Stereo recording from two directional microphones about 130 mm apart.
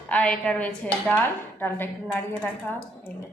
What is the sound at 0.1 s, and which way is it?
A woman's voice, 10° left (ahead or behind).